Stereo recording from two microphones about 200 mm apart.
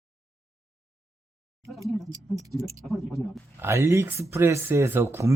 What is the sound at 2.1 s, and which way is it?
Speech, 15° right (ahead or behind).